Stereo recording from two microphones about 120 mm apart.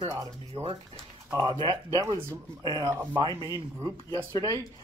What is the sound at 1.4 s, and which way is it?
Speech, 40° right (ahead or behind).